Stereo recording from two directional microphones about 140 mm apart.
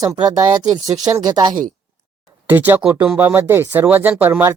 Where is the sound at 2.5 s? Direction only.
15° right (ahead or behind).